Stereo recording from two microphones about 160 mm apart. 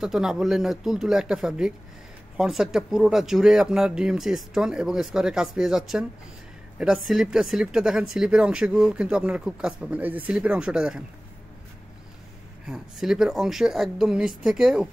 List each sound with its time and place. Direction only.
0.0 s speech: 5° right (ahead or behind)
12.6 s speech: 5° right (ahead or behind)